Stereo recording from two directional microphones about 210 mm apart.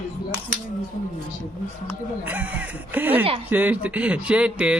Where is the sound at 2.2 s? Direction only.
5° right (ahead or behind).